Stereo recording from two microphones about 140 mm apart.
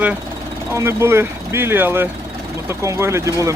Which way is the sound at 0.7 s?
20° right (ahead or behind).